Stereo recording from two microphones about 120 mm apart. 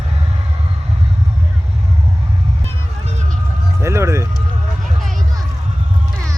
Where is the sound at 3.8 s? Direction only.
25° right (ahead or behind).